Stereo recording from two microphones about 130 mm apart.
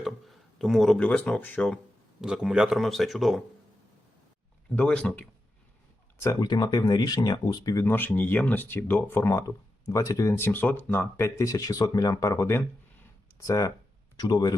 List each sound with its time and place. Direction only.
0.0 s speech: centre (ahead or behind)
2.2 s speech: 5° right (ahead or behind)
4.7 s speech: 10° left (ahead or behind)
6.1 s speech: 25° left (ahead or behind)
7.9 s speech: 15° left (ahead or behind); by 14.5 s 30° left (ahead or behind)